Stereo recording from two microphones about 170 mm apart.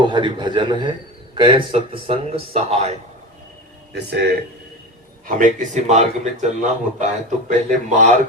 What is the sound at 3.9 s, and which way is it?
Speech, 75° right (ahead or behind).